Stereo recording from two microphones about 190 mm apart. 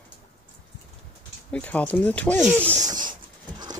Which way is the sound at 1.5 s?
5° left (ahead or behind).